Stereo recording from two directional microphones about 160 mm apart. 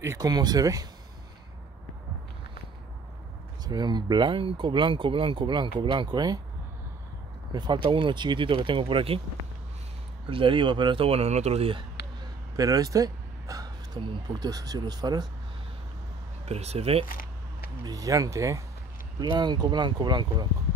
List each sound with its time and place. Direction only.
0.0 s speech: 20° right (ahead or behind)
3.6 s speech: 25° right (ahead or behind)
7.5 s speech: 30° right (ahead or behind)
10.3 s speech: 30° right (ahead or behind)
12.5 s speech: 20° right (ahead or behind)
16.4 s speech: 40° right (ahead or behind)
17.1 s a sound: 60° left (ahead or behind)
17.8 s speech: 20° right (ahead or behind)